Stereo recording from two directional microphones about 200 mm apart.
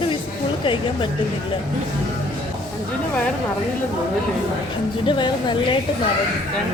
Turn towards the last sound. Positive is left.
turn(degrees=25)  # may be behind; listen again after turning